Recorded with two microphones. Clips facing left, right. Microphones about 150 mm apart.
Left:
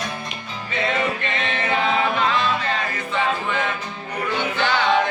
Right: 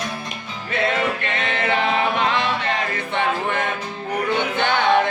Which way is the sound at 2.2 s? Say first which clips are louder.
Even; 65° right (ahead or behind).